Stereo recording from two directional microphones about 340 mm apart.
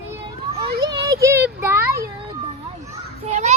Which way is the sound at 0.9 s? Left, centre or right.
Centre.